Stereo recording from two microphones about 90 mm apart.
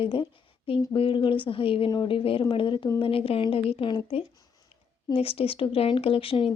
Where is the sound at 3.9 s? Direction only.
65° left (ahead or behind).